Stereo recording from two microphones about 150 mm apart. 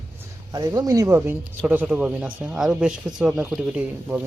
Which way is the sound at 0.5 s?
25° right (ahead or behind).